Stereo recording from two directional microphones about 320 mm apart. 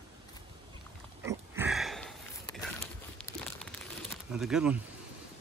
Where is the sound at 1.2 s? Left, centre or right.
Centre.